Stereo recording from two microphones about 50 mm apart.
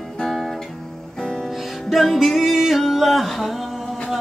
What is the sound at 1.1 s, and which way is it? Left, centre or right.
Music, centre.